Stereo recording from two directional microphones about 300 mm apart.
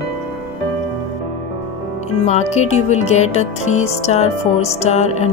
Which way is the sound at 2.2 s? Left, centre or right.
Left.